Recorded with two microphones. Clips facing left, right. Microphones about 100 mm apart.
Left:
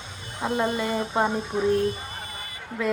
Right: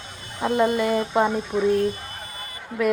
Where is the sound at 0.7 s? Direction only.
20° left (ahead or behind).